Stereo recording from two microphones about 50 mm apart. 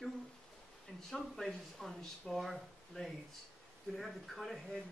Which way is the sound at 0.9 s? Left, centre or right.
Centre.